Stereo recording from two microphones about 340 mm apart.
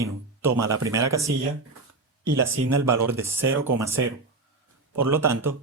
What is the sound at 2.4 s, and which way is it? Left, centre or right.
Speech, centre.